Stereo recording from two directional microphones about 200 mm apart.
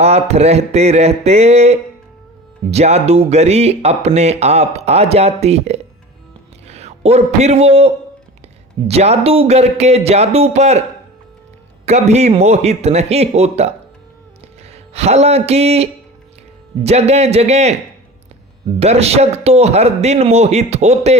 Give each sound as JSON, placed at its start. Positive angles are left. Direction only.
{"t": 0.0, "sound": "a man's voice", "side_deg": -30}
{"t": 11.9, "sound": "speech", "side_deg": -35}
{"t": 14.7, "sound": "speech", "side_deg": -30}
{"t": 18.8, "sound": "speech", "side_deg": -30}